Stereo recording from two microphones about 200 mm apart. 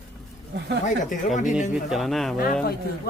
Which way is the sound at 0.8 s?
40° left (ahead or behind).